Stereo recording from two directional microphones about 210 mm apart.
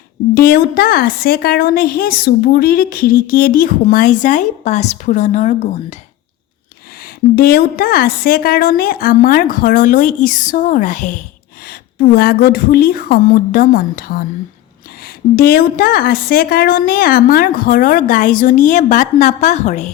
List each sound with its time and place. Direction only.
0.3 s a woman's voice: 45° left (ahead or behind)
7.3 s a woman's voice: 45° left (ahead or behind)
11.7 s a woman's voice: 45° left (ahead or behind)
15.4 s a woman's voice: 45° left (ahead or behind)